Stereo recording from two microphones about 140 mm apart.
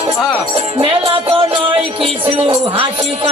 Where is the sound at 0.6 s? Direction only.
40° right (ahead or behind).